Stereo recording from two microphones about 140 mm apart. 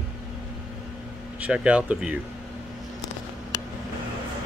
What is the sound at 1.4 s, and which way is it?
Speech, 10° right (ahead or behind).